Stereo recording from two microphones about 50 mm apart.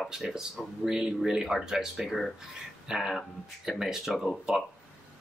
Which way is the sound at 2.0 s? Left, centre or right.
Centre.